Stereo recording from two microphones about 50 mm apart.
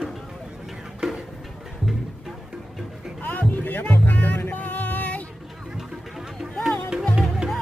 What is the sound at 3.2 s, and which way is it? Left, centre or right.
Music, left.